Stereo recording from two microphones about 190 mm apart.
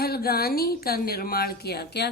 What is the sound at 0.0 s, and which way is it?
Speech, 55° left (ahead or behind).